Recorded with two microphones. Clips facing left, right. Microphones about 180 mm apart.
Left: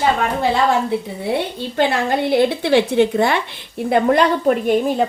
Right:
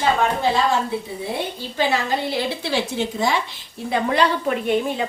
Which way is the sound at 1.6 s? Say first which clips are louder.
Left 2 dB; 60° left (ahead or behind).